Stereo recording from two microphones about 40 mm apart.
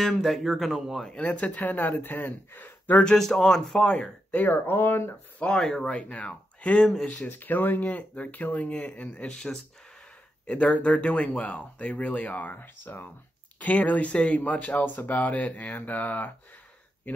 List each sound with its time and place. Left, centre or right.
0.0 s speech: centre
1.2 s speech: left
3.2 s speech: centre
3.7 s speech: left
4.3 s speech: left
5.6 s speech: centre
5.9 s speech: left
7.2 s speech: left
7.8 s speech: left
9.2 s speech: centre
10.4 s speech: left
12.5 s speech: left
13.6 s speech: left